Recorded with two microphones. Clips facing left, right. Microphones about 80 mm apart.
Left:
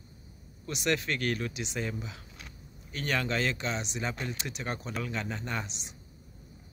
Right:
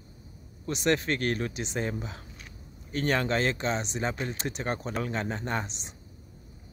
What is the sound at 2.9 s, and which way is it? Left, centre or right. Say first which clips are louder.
Speech: right 4 dB; right.